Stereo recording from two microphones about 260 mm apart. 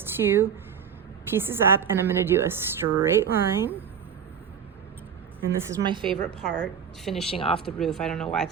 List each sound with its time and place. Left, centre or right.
0.0 s a woman's voice: centre
5.7 s a woman's voice: centre
6.4 s speech: centre
7.3 s speech: left
7.6 s speech: centre